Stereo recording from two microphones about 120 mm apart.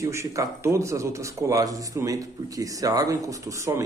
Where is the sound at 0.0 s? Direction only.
25° right (ahead or behind).